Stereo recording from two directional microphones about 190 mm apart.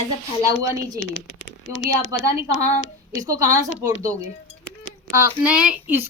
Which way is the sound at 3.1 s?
15° right (ahead or behind).